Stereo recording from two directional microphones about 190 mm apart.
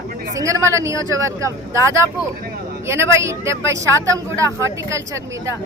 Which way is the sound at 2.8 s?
15° right (ahead or behind).